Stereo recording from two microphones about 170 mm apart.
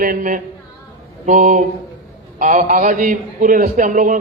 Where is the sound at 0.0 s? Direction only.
55° right (ahead or behind).